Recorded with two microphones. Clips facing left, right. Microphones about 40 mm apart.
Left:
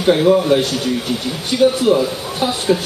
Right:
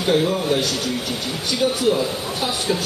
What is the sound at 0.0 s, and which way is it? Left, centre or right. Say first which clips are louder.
Speech: left 6 dB; centre.